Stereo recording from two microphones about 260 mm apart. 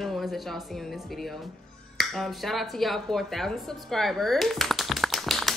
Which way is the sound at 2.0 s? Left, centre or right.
Centre.